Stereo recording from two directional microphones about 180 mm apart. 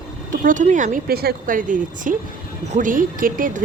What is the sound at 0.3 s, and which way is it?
Speech, 45° right (ahead or behind).